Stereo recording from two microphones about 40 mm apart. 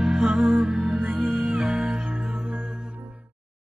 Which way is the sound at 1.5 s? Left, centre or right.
Right.